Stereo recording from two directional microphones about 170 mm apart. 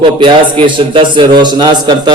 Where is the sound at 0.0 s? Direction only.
30° right (ahead or behind).